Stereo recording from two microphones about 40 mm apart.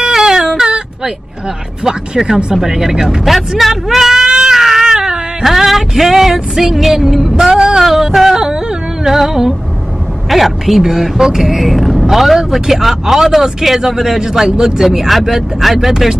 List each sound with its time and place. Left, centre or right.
0.0 s baby cry: centre
1.9 s speech: centre
4.3 s cat: centre
5.4 s music: centre
7.3 s speech: centre
10.3 s music: centre
10.8 s speech: centre